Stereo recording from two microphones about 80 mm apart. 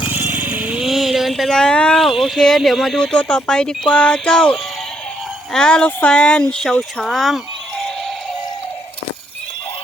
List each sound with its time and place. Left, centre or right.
0.1 s vehicle: right
0.8 s speech: centre